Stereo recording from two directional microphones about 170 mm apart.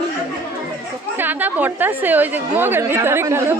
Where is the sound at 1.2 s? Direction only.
10° right (ahead or behind).